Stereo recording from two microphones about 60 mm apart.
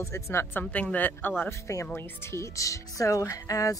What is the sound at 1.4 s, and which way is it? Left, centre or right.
Speech, left.